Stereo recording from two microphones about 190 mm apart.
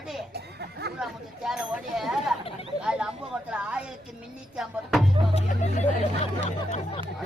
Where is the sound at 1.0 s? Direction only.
Centre (ahead or behind).